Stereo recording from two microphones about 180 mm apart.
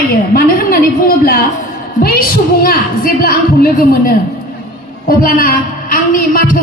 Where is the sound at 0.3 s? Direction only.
55° left (ahead or behind).